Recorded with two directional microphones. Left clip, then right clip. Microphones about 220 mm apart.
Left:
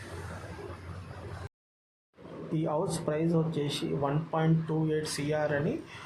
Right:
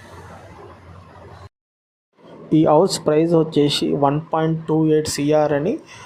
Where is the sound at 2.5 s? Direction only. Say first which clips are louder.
Right 17 dB; 40° right (ahead or behind).